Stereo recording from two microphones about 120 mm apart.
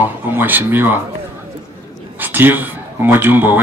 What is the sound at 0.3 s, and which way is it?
Speech, 15° right (ahead or behind).